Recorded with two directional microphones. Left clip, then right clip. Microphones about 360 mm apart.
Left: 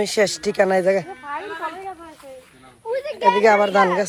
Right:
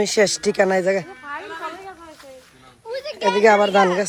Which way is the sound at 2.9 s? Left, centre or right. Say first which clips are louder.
Left 3 dB; centre.